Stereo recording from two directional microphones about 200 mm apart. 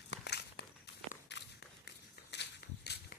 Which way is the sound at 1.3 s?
60° left (ahead or behind).